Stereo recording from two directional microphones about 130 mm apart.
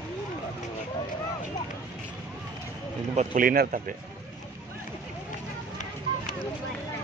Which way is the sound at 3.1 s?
90° right.